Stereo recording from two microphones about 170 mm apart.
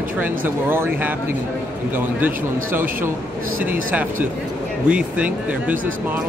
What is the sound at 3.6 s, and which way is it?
Speech, 10° right (ahead or behind).